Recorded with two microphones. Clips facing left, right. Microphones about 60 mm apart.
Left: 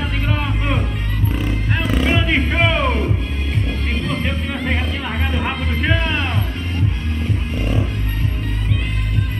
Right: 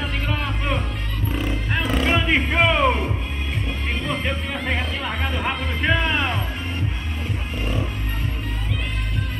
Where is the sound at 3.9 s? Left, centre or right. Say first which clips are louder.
Left 2 dB; centre.